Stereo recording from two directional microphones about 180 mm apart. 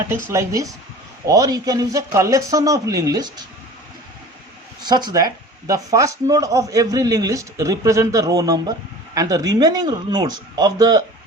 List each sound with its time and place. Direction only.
0.1 s speech: 15° right (ahead or behind)
4.8 s speech: 20° right (ahead or behind)